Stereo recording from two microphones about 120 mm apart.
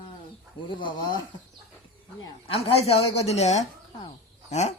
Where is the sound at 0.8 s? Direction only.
40° left (ahead or behind).